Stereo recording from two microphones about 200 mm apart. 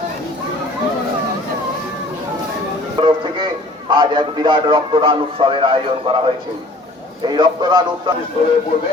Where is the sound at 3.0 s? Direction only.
25° right (ahead or behind).